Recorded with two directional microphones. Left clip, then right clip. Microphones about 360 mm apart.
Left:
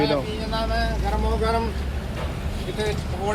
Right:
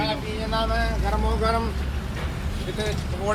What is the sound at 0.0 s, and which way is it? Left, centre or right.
Vehicle, centre.